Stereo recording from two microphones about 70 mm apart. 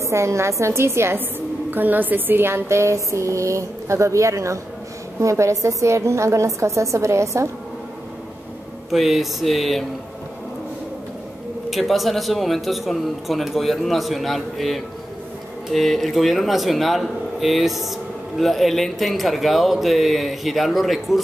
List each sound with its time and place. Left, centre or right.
0.0 s speech: right
1.7 s speech: right
8.9 s speech: centre
11.7 s speech: centre